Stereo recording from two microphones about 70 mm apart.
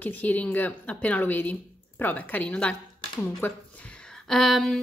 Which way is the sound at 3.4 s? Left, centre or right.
Left.